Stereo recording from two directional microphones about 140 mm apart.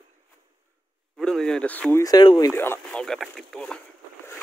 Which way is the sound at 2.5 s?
15° left (ahead or behind).